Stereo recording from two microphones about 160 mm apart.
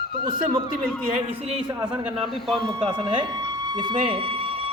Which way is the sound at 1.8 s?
30° right (ahead or behind).